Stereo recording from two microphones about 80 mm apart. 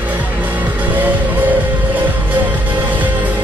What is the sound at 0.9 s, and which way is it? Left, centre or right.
Music, right.